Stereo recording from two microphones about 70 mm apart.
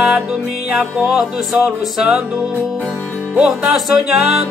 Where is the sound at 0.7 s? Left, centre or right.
Centre.